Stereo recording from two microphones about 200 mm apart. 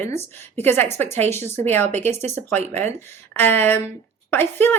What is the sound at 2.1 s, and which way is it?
Speech, 35° right (ahead or behind).